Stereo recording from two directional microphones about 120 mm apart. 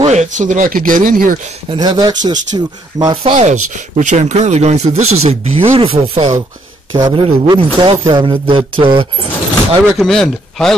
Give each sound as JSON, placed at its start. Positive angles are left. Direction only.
{"t": 0.0, "sound": "speech", "side_deg": -70}
{"t": 1.7, "sound": "speech", "side_deg": -35}
{"t": 3.3, "sound": "speech", "side_deg": -85}
{"t": 9.9, "sound": "a man's voice", "side_deg": 5}